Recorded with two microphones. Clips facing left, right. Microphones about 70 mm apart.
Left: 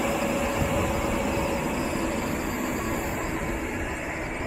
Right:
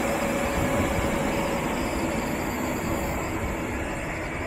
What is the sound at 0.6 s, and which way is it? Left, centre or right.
Vehicle, centre.